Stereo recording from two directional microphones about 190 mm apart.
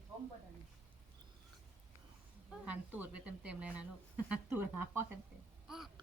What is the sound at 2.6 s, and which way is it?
Speech, 10° right (ahead or behind).